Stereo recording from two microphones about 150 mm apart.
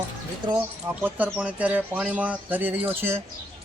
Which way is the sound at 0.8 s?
10° right (ahead or behind).